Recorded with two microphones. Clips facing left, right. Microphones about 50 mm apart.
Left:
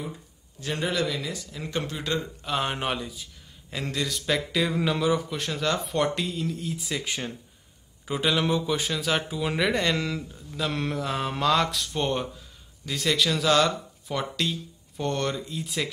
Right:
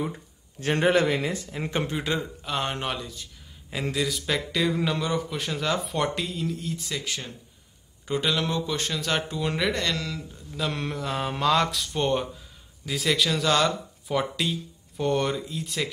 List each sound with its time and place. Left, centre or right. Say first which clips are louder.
0.6 s speech: right 6 dB; right; by 2.2 s centre
2.4 s a man's voice: left 1 dB; centre
3.7 s a man's voice: right 2 dB; centre
7.0 s speech: left 2 dB; left
8.1 s speech: left 1 dB; centre
10.3 s a man's voice: left 1 dB; centre